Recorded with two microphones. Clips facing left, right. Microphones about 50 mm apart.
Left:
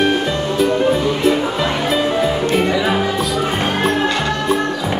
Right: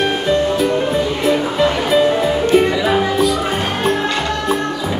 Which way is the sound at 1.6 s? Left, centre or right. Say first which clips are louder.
Right 4 dB; centre.